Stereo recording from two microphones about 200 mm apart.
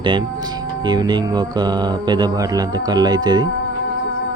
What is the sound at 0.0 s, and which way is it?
Speech, 25° right (ahead or behind).